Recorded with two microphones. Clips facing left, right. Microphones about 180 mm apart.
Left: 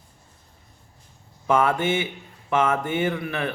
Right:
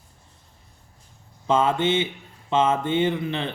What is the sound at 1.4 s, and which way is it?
A man's voice, 20° right (ahead or behind).